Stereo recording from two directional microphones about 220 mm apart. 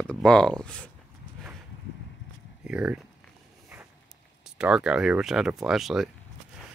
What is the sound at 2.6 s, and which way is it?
Speech, 5° right (ahead or behind).